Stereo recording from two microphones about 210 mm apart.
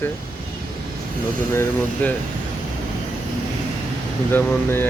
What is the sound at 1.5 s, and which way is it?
Speech, 10° left (ahead or behind).